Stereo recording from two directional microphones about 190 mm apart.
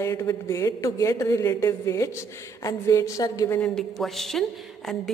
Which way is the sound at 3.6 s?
Centre (ahead or behind).